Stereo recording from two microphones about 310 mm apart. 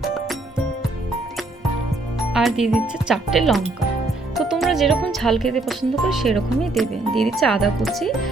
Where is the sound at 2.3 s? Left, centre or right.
Centre.